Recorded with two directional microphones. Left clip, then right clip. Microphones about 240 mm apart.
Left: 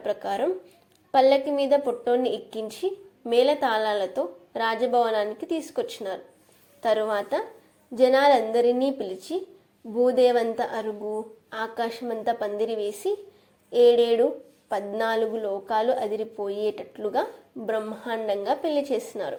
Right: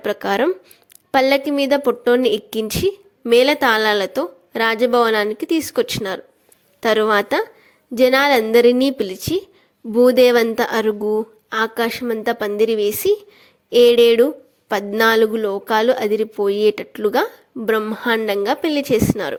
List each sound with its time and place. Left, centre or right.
0.0 s a woman's voice: right